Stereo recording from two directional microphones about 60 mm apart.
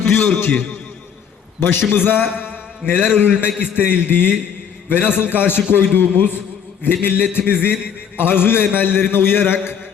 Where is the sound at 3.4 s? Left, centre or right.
Left.